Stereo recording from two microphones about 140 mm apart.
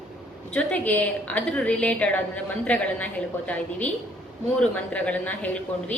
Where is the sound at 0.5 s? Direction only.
10° left (ahead or behind).